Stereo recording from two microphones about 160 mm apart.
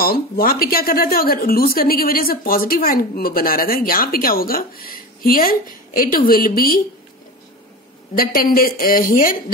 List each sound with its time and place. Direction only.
0.0 s speech: 65° left (ahead or behind)
8.2 s speech: 65° left (ahead or behind)